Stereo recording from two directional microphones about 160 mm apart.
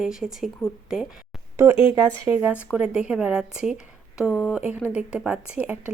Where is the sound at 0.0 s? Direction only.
5° right (ahead or behind).